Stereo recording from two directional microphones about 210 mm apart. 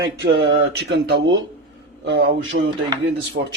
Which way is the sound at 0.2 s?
55° right (ahead or behind).